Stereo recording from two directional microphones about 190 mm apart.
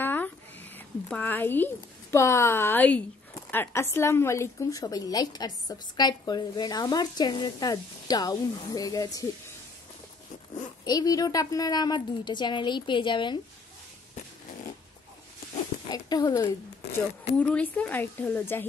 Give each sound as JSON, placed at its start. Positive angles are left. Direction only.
{"t": 0.0, "sound": "a sound", "side_deg": 10}
{"t": 1.0, "sound": "a woman's voice", "side_deg": 10}
{"t": 10.9, "sound": "a woman's voice", "side_deg": 20}
{"t": 15.9, "sound": "a woman's voice", "side_deg": 20}
{"t": 16.4, "sound": "a woman's voice", "side_deg": 10}